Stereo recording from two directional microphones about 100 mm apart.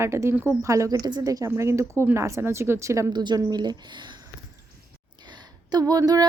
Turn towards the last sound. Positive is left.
turn(degrees=-40)  # may be behind; listen again after turning